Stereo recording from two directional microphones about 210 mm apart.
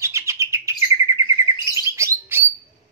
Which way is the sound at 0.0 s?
15° right (ahead or behind).